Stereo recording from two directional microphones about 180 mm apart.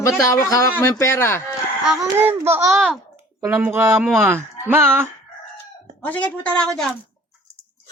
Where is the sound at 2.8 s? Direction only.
Centre (ahead or behind).